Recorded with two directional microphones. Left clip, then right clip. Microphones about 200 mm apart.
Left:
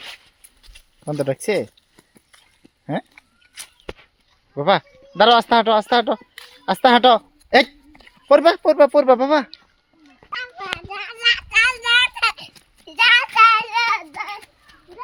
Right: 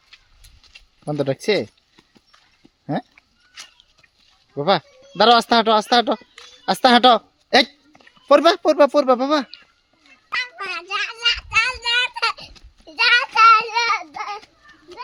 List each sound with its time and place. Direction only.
1.0 s speech: 15° right (ahead or behind)
2.8 s goat: 20° right (ahead or behind)
3.2 s a sound: 45° left (ahead or behind)
4.5 s a woman's voice: 20° right (ahead or behind)
11.2 s a sound: 10° right (ahead or behind)
12.8 s child singing: 10° right (ahead or behind)